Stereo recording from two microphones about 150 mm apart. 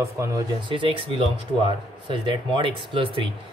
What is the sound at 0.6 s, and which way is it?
Speech, 35° right (ahead or behind).